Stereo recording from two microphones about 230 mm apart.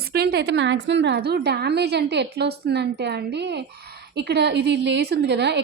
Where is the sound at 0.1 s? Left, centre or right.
Right.